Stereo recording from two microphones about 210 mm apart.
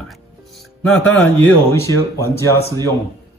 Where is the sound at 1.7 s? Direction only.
10° left (ahead or behind).